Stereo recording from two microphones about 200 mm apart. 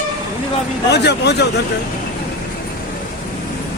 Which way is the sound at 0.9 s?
55° left (ahead or behind).